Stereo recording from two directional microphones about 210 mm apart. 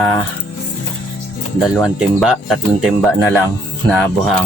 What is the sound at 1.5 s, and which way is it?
Speech, centre (ahead or behind).